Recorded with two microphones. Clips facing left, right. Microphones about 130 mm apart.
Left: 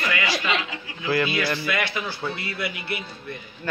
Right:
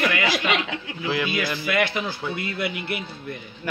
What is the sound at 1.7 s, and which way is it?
Speech, 50° right (ahead or behind).